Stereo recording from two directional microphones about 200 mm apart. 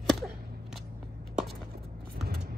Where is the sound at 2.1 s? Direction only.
50° right (ahead or behind).